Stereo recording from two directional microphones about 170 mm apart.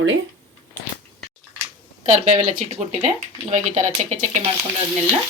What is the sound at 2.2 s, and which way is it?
Speech, 45° right (ahead or behind).